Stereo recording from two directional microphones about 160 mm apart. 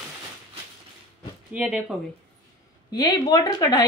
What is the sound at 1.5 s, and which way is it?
Speech, 5° right (ahead or behind).